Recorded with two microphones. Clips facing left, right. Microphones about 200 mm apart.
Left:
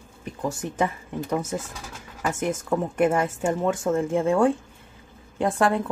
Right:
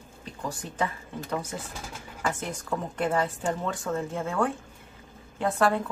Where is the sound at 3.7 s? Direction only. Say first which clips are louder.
Left 7 dB; 25° left (ahead or behind).